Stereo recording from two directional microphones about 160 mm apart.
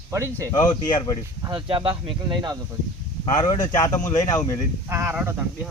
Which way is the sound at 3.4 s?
25° left (ahead or behind).